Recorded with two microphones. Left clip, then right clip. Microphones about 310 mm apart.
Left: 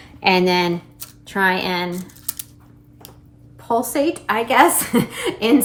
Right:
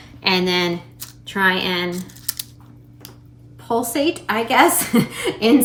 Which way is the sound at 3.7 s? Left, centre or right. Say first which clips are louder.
Left 1 dB; centre.